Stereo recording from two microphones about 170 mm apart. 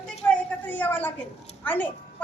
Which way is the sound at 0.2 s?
20° left (ahead or behind).